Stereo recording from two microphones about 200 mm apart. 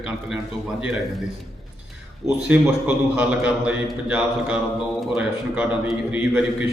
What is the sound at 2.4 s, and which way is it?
A man's voice, 5° right (ahead or behind).